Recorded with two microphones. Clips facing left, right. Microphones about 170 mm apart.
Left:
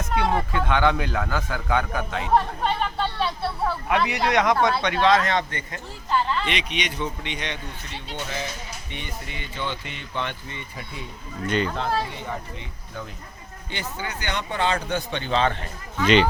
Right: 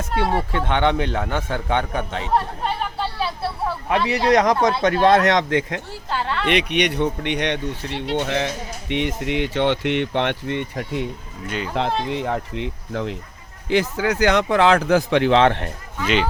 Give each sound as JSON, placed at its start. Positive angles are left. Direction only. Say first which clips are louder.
{"t": 0.5, "sound": "a man's voice", "louder": "right 2 dB", "side_deg": -25}
{"t": 2.3, "sound": "chatter", "louder": "left 1 dB", "side_deg": -5}
{"t": 3.8, "sound": "a man's voice", "louder": "right 6 dB", "side_deg": -30}
{"t": 4.8, "sound": "speech", "louder": "right 5 dB", "side_deg": -50}
{"t": 8.9, "sound": "speech", "louder": "right 16 dB", "side_deg": -85}
{"t": 11.4, "sound": "speech", "louder": "left 4 dB", "side_deg": -5}
{"t": 12.1, "sound": "speech", "louder": "right 9 dB", "side_deg": -90}
{"t": 16.0, "sound": "speech", "louder": "left 3 dB", "side_deg": -5}